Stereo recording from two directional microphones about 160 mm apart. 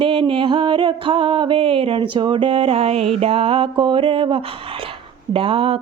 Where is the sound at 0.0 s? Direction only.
30° right (ahead or behind).